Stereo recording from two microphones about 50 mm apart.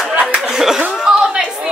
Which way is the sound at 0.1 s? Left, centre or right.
Right.